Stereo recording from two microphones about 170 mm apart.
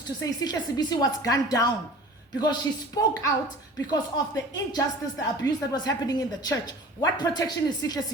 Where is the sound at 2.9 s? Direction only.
25° left (ahead or behind).